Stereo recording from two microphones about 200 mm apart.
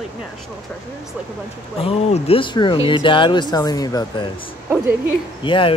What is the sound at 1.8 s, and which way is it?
Speech, 30° left (ahead or behind).